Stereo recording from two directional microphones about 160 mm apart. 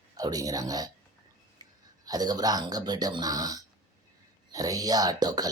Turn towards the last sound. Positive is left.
turn(degrees=-25)  # may be behind; listen again after turning